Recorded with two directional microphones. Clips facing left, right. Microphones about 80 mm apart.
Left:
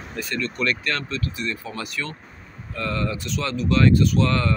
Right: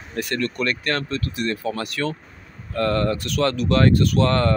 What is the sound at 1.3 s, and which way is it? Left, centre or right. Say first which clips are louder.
Speech: right 5 dB; right.